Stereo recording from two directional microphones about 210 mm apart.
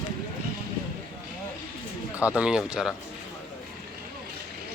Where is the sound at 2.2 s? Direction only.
5° right (ahead or behind).